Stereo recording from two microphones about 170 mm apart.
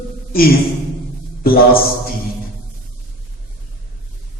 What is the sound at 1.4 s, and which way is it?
Speech, 60° left (ahead or behind).